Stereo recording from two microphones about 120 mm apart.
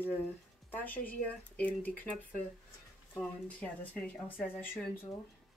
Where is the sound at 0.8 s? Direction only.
15° left (ahead or behind).